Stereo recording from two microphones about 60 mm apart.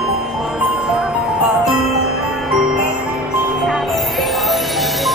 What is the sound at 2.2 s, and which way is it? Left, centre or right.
Glockenspiel, centre.